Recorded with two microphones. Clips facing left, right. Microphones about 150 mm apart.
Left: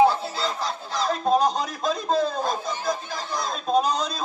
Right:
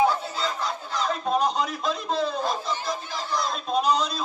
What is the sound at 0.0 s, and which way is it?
Speech, 35° left (ahead or behind).